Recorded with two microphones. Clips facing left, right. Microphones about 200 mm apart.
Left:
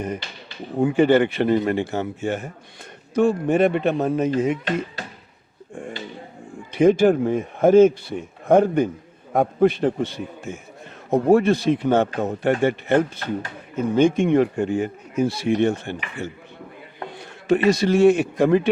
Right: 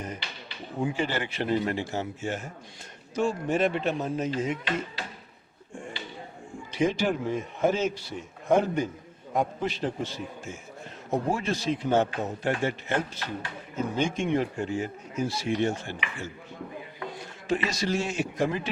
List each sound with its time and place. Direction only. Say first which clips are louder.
0.0 s a man's voice: left 8 dB; 60° left (ahead or behind)
6.7 s a man's voice: left 10 dB; 55° left (ahead or behind)